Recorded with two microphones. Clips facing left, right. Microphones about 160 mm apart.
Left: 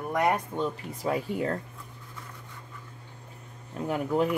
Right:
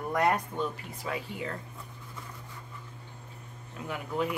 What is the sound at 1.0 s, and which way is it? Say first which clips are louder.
Speech: left 8 dB; 45° left (ahead or behind).